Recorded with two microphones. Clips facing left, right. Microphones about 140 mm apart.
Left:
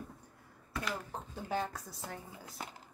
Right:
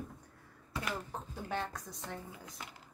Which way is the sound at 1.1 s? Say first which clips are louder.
Left 1 dB; 5° left (ahead or behind).